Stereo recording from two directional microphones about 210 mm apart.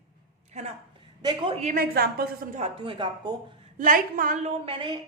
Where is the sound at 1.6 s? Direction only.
40° right (ahead or behind); by 3.3 s 25° right (ahead or behind).